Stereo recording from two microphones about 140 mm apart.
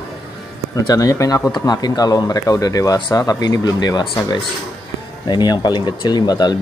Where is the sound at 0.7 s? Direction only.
25° left (ahead or behind).